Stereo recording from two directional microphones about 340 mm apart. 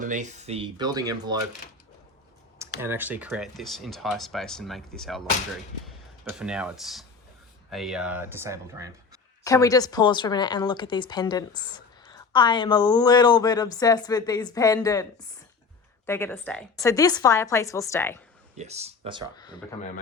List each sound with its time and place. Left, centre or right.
0.0 s speech: right
2.8 s speech: centre
6.4 s speech: centre
9.4 s speech: centre
16.0 s speech: centre
18.5 s speech: centre